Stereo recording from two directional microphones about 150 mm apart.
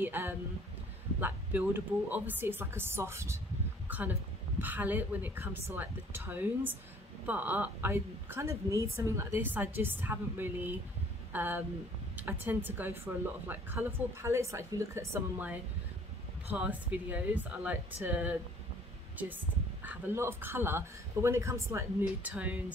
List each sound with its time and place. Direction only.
0.0 s a woman's voice: 15° right (ahead or behind)